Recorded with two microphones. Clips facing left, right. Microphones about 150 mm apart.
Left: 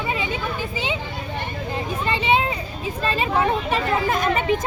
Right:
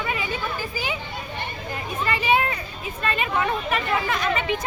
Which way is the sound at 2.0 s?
25° left (ahead or behind).